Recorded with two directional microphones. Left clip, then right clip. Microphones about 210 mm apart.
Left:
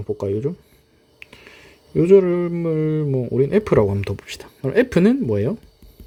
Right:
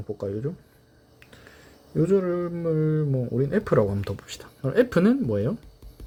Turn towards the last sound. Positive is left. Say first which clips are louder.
# left 5 dB
turn(degrees=30)  # may be behind; listen again after turning